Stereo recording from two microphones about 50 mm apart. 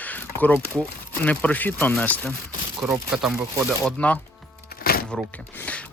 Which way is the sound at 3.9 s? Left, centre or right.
Left.